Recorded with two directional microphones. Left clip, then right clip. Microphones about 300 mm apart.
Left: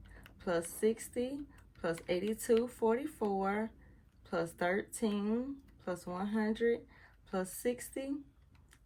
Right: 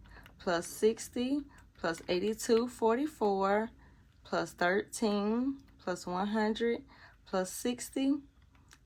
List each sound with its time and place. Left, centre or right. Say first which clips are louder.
0.2 s speech: right 2 dB; centre